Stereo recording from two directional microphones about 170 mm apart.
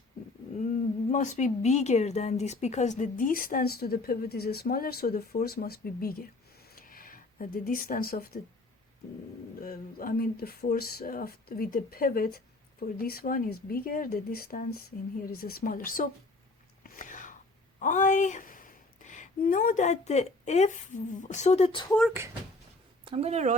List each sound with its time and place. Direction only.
1.1 s speech: 45° left (ahead or behind); by 6.2 s 60° left (ahead or behind)
6.7 s a sound: 55° left (ahead or behind)
9.6 s speech: 55° left (ahead or behind)
16.8 s whispering: 50° left (ahead or behind)
17.7 s speech: 45° left (ahead or behind)
21.8 s speech: 5° left (ahead or behind)
23.0 s speech: 35° right (ahead or behind)